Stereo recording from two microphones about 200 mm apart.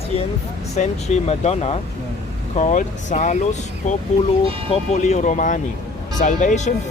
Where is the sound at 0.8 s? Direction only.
35° left (ahead or behind).